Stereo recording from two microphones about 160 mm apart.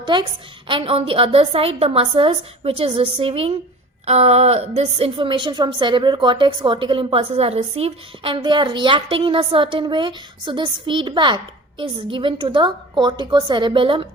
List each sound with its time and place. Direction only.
0.0 s a woman's voice: 30° right (ahead or behind)